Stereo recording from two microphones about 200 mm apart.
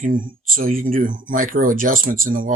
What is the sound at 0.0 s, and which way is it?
Speech, 45° right (ahead or behind).